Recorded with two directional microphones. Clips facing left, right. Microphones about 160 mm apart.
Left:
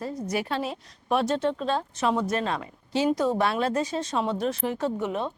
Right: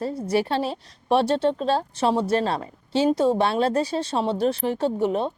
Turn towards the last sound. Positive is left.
turn(degrees=-30)  # may be behind; listen again after turning